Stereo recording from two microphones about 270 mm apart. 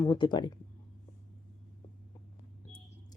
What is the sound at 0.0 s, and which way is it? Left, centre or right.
Speech, centre.